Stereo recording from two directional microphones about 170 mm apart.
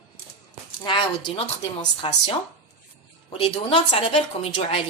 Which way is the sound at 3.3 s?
35° left (ahead or behind).